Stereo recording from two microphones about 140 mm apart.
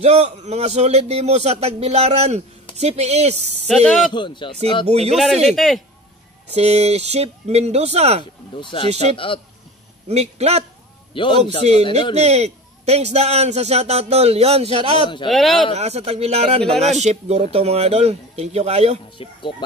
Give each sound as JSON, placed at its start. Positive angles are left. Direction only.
{"t": 0.0, "sound": "a man's voice", "side_deg": -45}
{"t": 3.6, "sound": "speech", "side_deg": 0}
{"t": 4.1, "sound": "speech", "side_deg": 35}
{"t": 4.8, "sound": "a man's voice", "side_deg": -50}
{"t": 5.1, "sound": "speech", "side_deg": 0}
{"t": 6.5, "sound": "a man's voice", "side_deg": -50}
{"t": 8.5, "sound": "speech", "side_deg": 35}
{"t": 10.0, "sound": "a man's voice", "side_deg": -50}
{"t": 11.1, "sound": "speech", "side_deg": 35}
{"t": 12.2, "sound": "a man's voice", "side_deg": -50}
{"t": 15.2, "sound": "speech", "side_deg": 0}
{"t": 15.7, "sound": "a man's voice", "side_deg": -50}
{"t": 19.2, "sound": "speech", "side_deg": 40}